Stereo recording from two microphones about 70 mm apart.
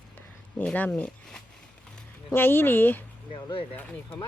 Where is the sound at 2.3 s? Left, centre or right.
Left.